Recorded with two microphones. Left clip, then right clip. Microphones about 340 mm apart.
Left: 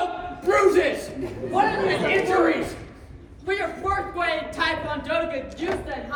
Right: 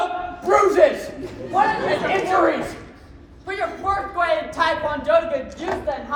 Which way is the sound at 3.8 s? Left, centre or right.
Centre.